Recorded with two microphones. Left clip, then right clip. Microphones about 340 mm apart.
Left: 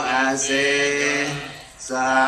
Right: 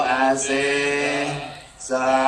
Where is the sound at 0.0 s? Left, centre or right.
Right.